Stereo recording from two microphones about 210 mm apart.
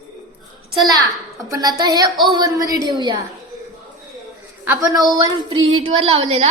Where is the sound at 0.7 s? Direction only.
20° right (ahead or behind).